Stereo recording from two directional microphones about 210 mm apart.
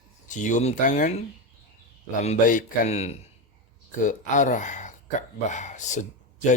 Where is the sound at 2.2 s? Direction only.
35° left (ahead or behind).